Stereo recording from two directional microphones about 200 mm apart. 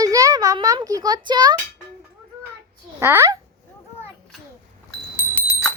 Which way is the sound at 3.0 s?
10° right (ahead or behind).